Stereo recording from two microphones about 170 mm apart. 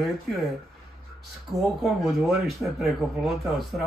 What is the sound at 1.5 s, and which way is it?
Speech, centre (ahead or behind).